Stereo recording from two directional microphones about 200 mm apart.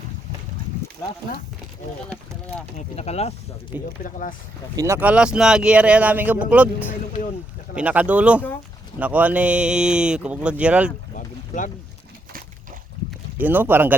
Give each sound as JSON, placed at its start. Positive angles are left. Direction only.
{"t": 2.9, "sound": "speech", "side_deg": 30}
{"t": 4.8, "sound": "speech", "side_deg": -10}
{"t": 11.1, "sound": "boat", "side_deg": 40}
{"t": 13.4, "sound": "speech", "side_deg": -10}